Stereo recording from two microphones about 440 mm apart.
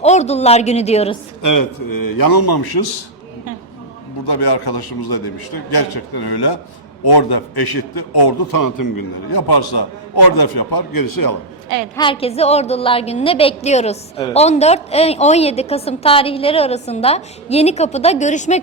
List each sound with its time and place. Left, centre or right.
0.0 s a woman's voice: centre
1.4 s a man's voice: left
4.3 s a man's voice: left
11.9 s a woman's voice: centre